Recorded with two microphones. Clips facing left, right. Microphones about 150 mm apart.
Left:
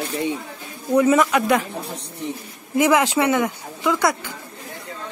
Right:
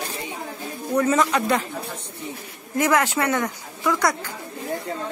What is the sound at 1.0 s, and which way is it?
Speech, 10° left (ahead or behind).